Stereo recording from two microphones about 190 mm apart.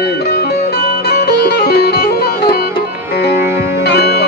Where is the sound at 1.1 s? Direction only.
60° left (ahead or behind).